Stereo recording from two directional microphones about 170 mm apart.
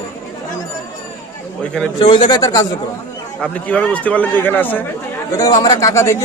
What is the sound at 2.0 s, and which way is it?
Speech, 30° left (ahead or behind).